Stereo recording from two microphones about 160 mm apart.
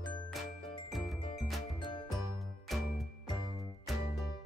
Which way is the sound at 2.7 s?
Centre (ahead or behind).